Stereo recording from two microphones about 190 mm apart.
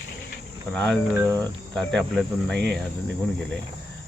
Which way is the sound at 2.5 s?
60° right (ahead or behind).